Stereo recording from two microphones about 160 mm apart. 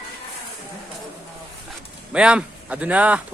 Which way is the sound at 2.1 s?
5° right (ahead or behind).